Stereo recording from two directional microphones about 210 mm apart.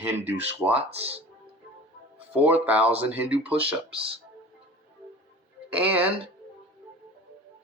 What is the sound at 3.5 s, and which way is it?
Speech, 25° right (ahead or behind).